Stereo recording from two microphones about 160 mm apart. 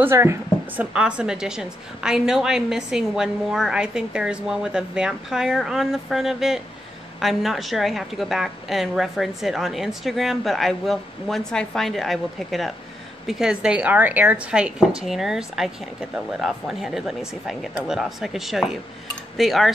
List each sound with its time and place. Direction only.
0.0 s a woman's voice: 15° right (ahead or behind); by 19.7 s centre (ahead or behind)